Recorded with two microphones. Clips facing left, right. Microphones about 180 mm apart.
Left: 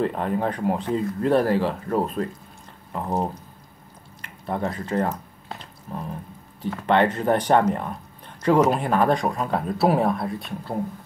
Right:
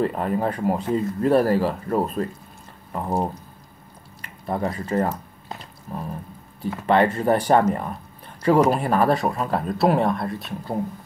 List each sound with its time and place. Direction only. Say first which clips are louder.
0.0 s speech: right 1 dB; 5° right (ahead or behind)
5.5 s a sound: right 1 dB; 5° right (ahead or behind)
6.6 s speech: right 1 dB; 5° right (ahead or behind)